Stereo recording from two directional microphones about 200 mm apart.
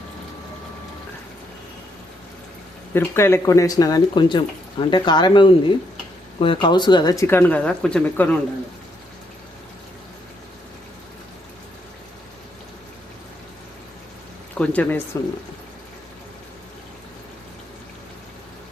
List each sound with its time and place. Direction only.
2.9 s speech: 10° left (ahead or behind)
14.5 s speech: 5° left (ahead or behind)